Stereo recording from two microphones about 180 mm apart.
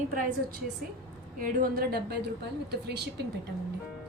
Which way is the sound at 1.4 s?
55° right (ahead or behind).